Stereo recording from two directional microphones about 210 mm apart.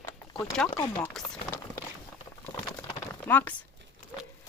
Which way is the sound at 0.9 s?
5° left (ahead or behind).